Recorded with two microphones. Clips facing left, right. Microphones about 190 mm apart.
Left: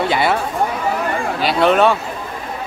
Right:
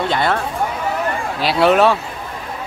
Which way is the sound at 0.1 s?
10° left (ahead or behind).